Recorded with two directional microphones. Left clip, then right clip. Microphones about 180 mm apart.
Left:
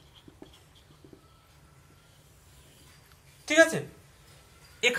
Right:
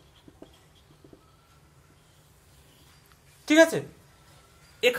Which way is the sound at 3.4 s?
60° right (ahead or behind).